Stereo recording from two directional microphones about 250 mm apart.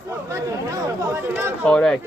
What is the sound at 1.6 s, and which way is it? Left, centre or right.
Speech, centre.